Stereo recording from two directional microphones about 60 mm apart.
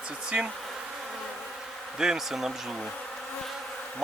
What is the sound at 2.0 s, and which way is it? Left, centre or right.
Speech, centre.